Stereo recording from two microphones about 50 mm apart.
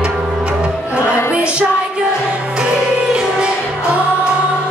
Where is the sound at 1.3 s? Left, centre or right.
Right.